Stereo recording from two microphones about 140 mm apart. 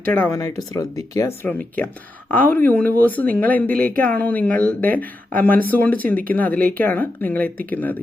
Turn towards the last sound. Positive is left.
turn(degrees=10)  # may be behind; listen again after turning